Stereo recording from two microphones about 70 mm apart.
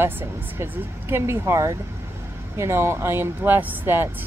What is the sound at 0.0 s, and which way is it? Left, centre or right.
A woman's voice, right.